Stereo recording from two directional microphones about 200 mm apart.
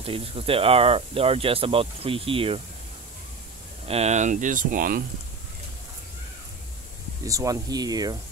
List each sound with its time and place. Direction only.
0.0 s speech: 30° right (ahead or behind)
3.8 s speech: 30° right (ahead or behind)
7.2 s speech: 15° right (ahead or behind)